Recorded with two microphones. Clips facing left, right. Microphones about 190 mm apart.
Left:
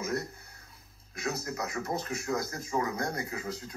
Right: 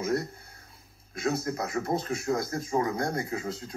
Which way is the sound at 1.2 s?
30° right (ahead or behind).